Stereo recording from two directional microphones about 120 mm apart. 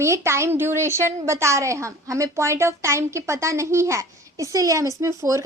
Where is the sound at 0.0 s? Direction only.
25° right (ahead or behind).